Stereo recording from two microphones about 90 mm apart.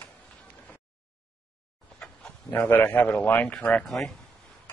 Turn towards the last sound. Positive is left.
turn(degrees=0)  # may be behind; listen again after turning